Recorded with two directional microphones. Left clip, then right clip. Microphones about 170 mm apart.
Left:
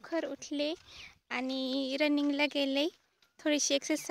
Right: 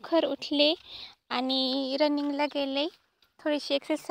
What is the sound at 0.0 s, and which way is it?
A woman's voice, 30° right (ahead or behind).